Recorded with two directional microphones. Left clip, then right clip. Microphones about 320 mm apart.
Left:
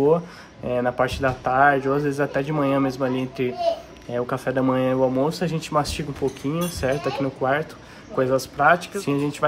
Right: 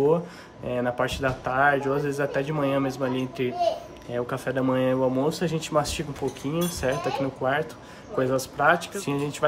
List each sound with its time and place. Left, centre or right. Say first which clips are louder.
0.7 s a man's voice: left 4 dB; centre